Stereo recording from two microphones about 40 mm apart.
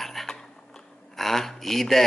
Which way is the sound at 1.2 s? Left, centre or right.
Centre.